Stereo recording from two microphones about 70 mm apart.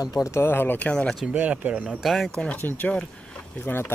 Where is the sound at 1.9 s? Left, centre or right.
Centre.